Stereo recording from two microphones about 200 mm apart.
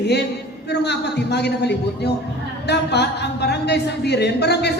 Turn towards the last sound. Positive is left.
turn(degrees=55)  # may be behind; listen again after turning